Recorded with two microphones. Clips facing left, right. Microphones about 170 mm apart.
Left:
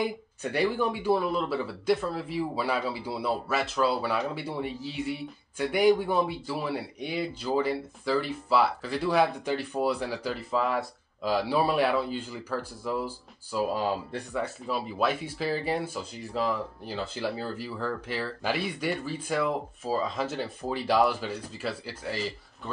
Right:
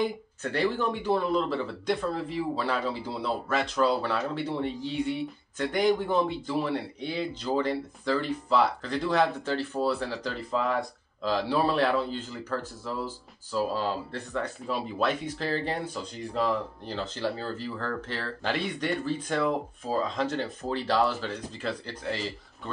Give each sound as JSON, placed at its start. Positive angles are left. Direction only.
{"t": 0.0, "sound": "speech", "side_deg": 10}